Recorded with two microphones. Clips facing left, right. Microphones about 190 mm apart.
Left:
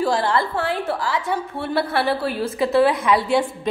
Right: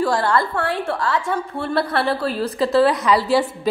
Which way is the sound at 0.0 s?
25° left (ahead or behind).